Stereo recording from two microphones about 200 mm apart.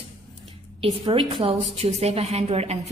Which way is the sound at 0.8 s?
30° right (ahead or behind).